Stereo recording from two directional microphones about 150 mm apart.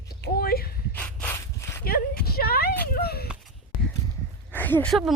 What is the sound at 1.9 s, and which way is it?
Speech, 90° left.